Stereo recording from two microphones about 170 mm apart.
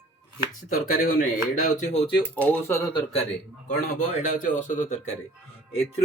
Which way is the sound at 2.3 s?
10° left (ahead or behind).